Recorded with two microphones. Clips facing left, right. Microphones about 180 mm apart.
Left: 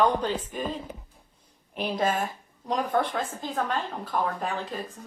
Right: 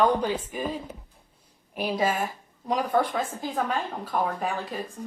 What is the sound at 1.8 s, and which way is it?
A woman's voice, 5° right (ahead or behind).